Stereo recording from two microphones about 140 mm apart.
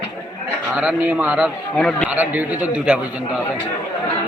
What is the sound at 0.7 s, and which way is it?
Speech, 10° right (ahead or behind).